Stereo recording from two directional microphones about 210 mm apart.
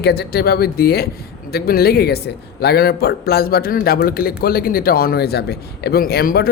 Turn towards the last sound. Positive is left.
turn(degrees=45)  # may be behind; listen again after turning